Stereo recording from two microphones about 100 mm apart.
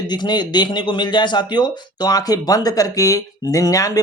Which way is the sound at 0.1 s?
45° left (ahead or behind).